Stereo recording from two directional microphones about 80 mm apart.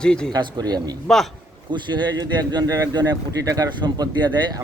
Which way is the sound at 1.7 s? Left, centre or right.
Right.